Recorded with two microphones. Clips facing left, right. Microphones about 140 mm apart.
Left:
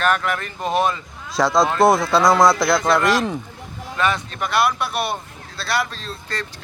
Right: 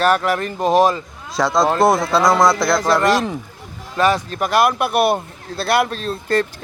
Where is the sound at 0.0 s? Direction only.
35° right (ahead or behind).